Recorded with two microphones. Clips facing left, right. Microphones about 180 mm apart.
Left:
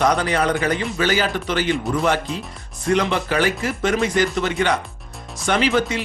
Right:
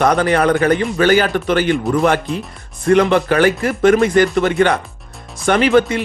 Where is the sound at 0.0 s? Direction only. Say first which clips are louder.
Right 5 dB; 55° right (ahead or behind).